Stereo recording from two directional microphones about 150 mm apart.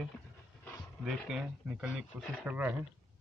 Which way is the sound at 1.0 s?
5° right (ahead or behind).